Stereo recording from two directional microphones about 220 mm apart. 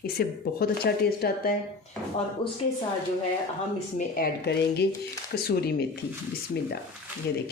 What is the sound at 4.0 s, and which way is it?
A woman's voice, 45° left (ahead or behind).